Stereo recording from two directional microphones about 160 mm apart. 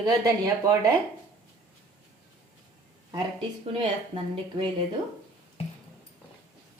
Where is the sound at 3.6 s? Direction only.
35° right (ahead or behind).